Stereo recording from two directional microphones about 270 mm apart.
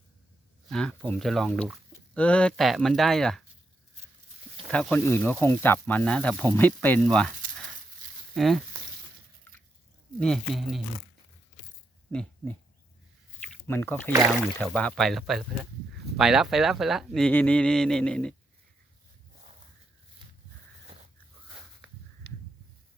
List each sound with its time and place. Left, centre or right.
0.7 s speech: centre
4.7 s speech: centre
8.4 s speech: centre
10.2 s speech: centre
12.1 s speech: centre
13.7 s speech: centre
22.3 s a sound: right